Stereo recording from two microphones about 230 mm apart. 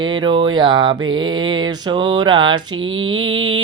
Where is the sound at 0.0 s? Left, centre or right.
Centre.